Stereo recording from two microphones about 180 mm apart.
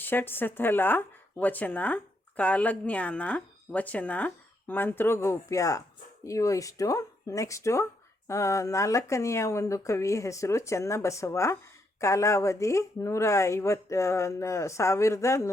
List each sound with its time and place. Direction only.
0.0 s speech: 10° left (ahead or behind)